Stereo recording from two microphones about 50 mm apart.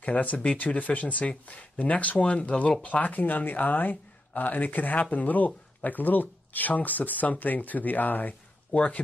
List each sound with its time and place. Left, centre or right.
0.0 s speech: left